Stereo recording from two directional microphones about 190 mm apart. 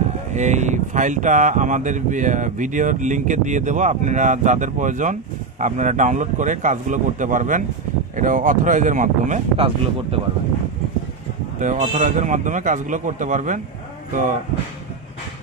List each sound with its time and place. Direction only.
0.3 s speech: 40° right (ahead or behind)
11.6 s speech: 40° right (ahead or behind)